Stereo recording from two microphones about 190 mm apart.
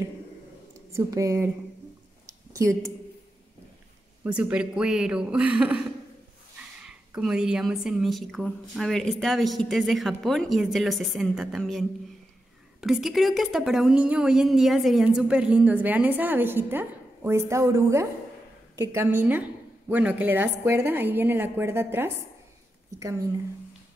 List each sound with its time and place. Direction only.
0.9 s a woman's voice: 15° right (ahead or behind)
2.6 s a woman's voice: 15° right (ahead or behind)
4.2 s a woman's voice: 5° right (ahead or behind)
6.8 s a woman's voice: 5° right (ahead or behind)
12.8 s a woman's voice: centre (ahead or behind); by 23.1 s 15° right (ahead or behind)